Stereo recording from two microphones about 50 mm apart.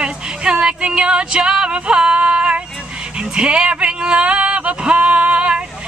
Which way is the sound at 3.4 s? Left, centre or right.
Centre.